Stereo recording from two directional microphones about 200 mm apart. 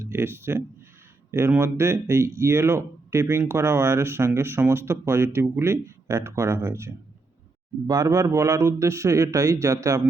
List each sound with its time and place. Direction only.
0.0 s speech: 10° right (ahead or behind)